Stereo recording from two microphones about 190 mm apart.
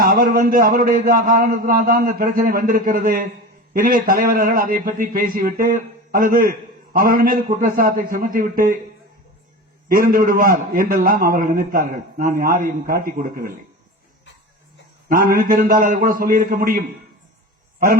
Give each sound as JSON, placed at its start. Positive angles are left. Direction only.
{"t": 0.0, "sound": "a man's voice", "side_deg": -50}
{"t": 9.9, "sound": "a man's voice", "side_deg": -50}
{"t": 15.1, "sound": "a man's voice", "side_deg": -45}